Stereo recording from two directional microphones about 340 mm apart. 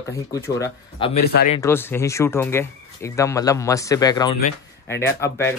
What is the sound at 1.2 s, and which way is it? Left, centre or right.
Speech, left.